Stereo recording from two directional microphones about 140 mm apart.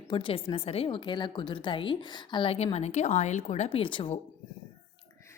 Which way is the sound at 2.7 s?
55° left (ahead or behind).